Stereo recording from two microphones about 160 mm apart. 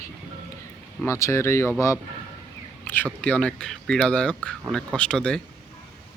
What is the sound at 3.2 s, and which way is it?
Speech, 5° left (ahead or behind).